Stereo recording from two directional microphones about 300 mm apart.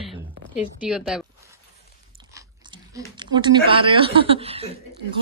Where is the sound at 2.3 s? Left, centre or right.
Centre.